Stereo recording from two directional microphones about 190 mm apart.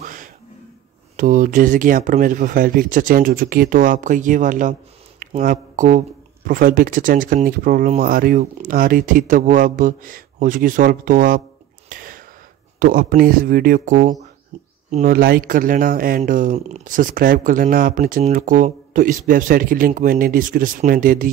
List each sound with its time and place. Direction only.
0.0 s a sound: 45° right (ahead or behind)
1.1 s speech: 45° right (ahead or behind)
11.9 s a sound: 45° right (ahead or behind)
12.7 s speech: 50° right (ahead or behind)
14.5 s bird: 35° right (ahead or behind)
14.9 s speech: 45° right (ahead or behind)